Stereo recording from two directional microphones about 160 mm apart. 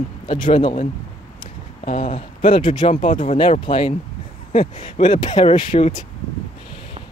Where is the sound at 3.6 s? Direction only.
30° left (ahead or behind).